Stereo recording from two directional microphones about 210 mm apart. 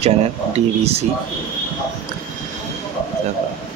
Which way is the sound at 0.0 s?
30° right (ahead or behind).